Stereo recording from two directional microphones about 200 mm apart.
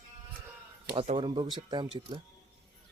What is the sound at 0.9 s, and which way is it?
Speech, 30° right (ahead or behind).